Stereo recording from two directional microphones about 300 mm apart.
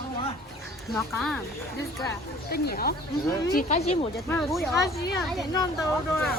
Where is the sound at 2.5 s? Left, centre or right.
Left.